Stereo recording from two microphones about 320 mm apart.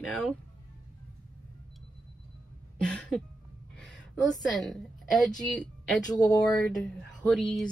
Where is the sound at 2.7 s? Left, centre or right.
Centre.